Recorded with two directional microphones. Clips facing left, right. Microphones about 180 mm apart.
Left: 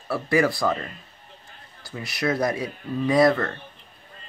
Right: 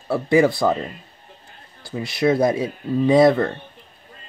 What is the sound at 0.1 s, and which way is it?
Speech, 25° right (ahead or behind).